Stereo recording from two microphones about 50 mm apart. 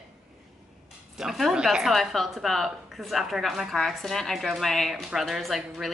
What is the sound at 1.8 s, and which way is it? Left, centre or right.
A woman's voice, centre.